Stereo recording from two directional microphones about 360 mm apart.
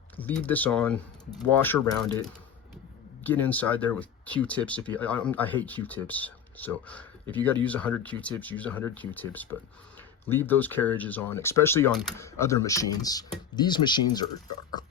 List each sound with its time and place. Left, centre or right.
0.2 s speech: centre